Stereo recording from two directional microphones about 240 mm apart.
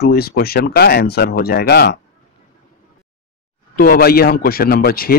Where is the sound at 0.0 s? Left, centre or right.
Left.